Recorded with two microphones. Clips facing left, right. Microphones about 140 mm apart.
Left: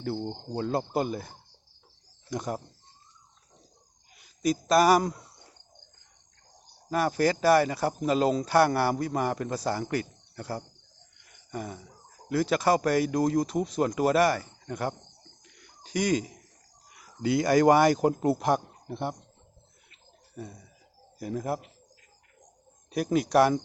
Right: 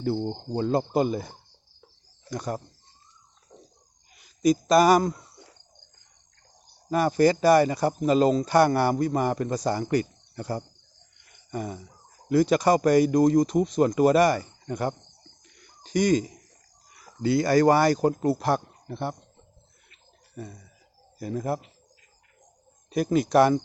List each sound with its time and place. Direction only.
0.0 s speech: 5° right (ahead or behind)
2.3 s speech: 20° left (ahead or behind)
4.1 s speech: centre (ahead or behind)
6.9 s speech: centre (ahead or behind)
11.3 s a sound: centre (ahead or behind)
12.3 s speech: centre (ahead or behind)
15.4 s a sound: 5° left (ahead or behind)
16.9 s speech: 10° left (ahead or behind)
20.3 s bird: 5° left (ahead or behind)
21.2 s speech: 5° left (ahead or behind)
22.9 s speech: 10° left (ahead or behind)